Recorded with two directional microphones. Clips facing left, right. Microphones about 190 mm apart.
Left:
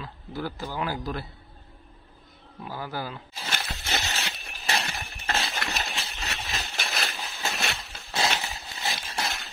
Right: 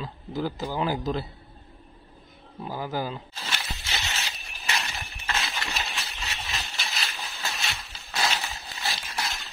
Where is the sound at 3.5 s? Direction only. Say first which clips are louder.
Left 4 dB; 50° left (ahead or behind).